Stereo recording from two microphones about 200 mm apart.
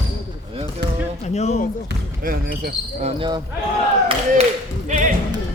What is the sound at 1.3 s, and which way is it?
Speech, 35° left (ahead or behind).